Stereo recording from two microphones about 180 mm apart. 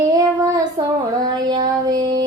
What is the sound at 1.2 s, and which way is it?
Child singing, 20° right (ahead or behind).